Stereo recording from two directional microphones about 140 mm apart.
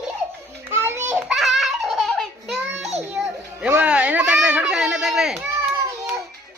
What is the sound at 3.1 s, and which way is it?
Music, 10° right (ahead or behind).